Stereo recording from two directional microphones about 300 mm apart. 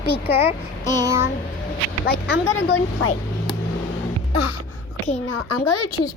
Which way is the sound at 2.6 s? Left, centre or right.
Left.